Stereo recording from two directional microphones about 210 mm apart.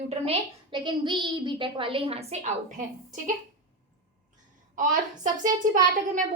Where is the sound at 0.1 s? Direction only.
25° right (ahead or behind).